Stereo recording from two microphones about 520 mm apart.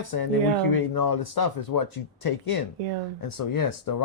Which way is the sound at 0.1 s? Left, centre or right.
Left.